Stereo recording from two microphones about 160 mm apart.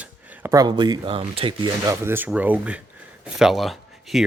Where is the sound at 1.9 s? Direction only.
15° right (ahead or behind).